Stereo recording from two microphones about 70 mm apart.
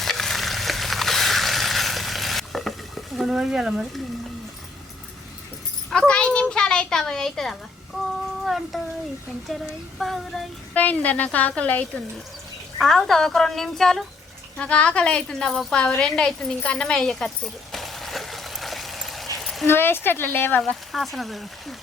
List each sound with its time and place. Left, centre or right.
0.0 s a sound: centre
5.9 s a woman's voice: centre
10.0 s a woman's voice: centre
10.8 s a woman's voice: left
12.8 s a woman's voice: centre
14.6 s a woman's voice: centre
16.0 s a sound: centre
19.6 s speech: left
20.9 s a woman's voice: centre